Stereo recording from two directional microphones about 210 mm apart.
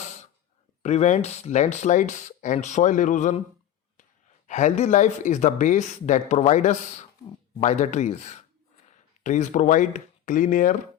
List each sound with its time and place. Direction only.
0.8 s speech: 35° left (ahead or behind)
4.4 s speech: 35° left (ahead or behind)